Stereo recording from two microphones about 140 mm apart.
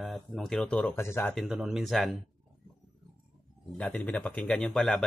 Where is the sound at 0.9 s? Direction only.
20° left (ahead or behind).